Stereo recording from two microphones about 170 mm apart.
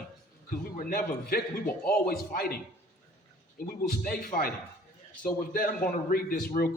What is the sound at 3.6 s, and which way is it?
Speech, 60° left (ahead or behind).